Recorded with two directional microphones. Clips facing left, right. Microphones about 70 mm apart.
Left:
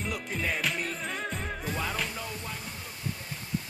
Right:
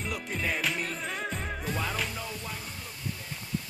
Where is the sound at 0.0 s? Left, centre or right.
Centre.